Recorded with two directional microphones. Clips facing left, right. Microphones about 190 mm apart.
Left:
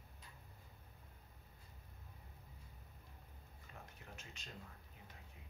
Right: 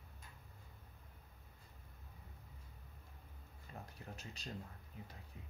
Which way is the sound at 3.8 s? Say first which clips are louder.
Right 5 dB; 35° right (ahead or behind).